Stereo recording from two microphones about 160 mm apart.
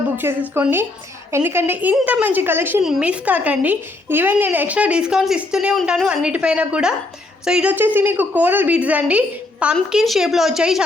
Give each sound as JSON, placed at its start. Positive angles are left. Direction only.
{"t": 0.2, "sound": "speech", "side_deg": -15}